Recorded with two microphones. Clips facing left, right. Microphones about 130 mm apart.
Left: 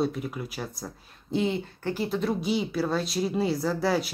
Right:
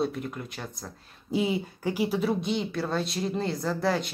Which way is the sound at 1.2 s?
10° right (ahead or behind).